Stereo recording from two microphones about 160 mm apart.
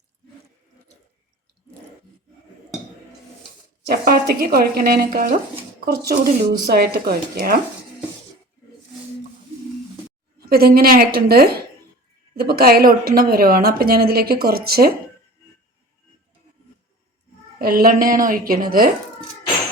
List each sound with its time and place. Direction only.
3.8 s a woman's voice: 75° right (ahead or behind)
10.4 s a woman's voice: 75° right (ahead or behind)
17.6 s a woman's voice: 70° right (ahead or behind)